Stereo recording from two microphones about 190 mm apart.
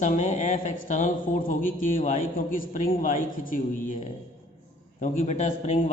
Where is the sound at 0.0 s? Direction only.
40° left (ahead or behind).